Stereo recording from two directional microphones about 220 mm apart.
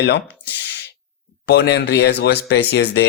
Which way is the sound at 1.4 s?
50° left (ahead or behind).